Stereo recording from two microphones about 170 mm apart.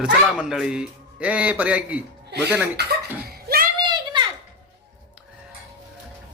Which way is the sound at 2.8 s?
75° right (ahead or behind).